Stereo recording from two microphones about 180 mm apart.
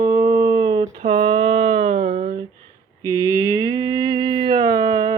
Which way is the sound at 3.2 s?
20° right (ahead or behind).